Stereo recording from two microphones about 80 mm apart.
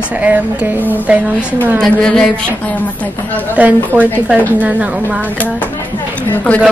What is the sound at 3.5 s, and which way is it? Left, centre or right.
A woman's voice, right.